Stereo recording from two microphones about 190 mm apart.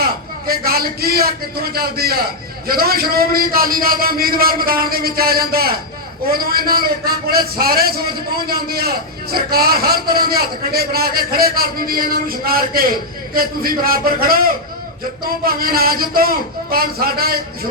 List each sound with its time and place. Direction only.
0.0 s a man's voice: 55° right (ahead or behind)